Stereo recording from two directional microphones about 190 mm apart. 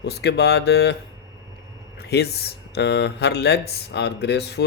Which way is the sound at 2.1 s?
60° left (ahead or behind).